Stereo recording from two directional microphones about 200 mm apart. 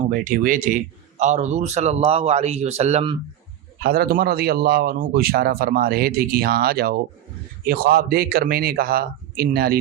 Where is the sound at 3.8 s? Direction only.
50° right (ahead or behind).